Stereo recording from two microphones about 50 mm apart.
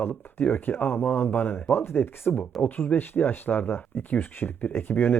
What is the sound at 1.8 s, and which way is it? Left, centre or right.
Speech, left.